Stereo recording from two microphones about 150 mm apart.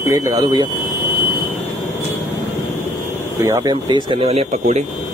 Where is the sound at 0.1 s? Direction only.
20° right (ahead or behind).